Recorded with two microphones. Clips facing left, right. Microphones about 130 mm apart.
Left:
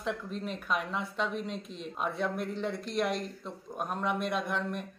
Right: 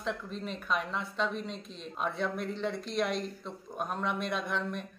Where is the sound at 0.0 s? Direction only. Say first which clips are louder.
Left 1 dB; 5° left (ahead or behind).